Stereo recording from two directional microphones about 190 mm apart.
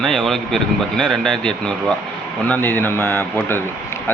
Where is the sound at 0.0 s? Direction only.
5° left (ahead or behind).